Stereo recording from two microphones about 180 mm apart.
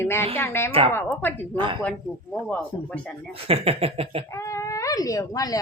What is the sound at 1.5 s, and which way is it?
Speech, 25° right (ahead or behind).